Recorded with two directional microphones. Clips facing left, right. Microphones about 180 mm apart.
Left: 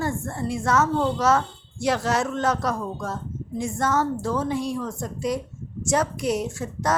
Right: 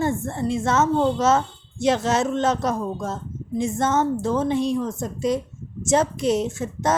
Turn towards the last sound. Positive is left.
turn(degrees=-25)  # may be behind; listen again after turning